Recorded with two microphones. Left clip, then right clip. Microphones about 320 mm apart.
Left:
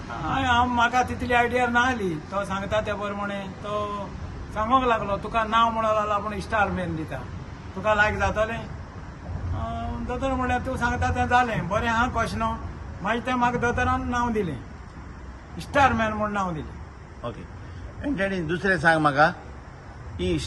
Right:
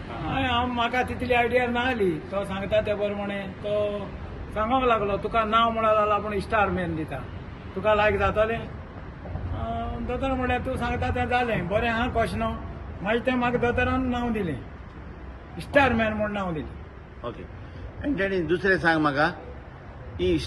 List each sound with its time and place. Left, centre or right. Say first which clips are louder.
0.2 s a sound: left 3 dB; centre
0.8 s a man's voice: left 3 dB; centre
18.2 s a man's voice: right 2 dB; left